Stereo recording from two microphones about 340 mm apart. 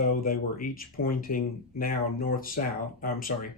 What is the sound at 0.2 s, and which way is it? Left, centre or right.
Speech, left.